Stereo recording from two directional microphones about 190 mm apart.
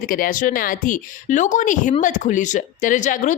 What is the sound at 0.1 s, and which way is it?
A woman's voice, 45° left (ahead or behind).